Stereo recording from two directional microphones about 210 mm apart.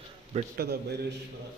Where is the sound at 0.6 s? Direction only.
50° right (ahead or behind).